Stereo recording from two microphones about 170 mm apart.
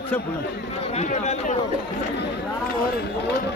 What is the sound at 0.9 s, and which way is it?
Speech, 40° left (ahead or behind).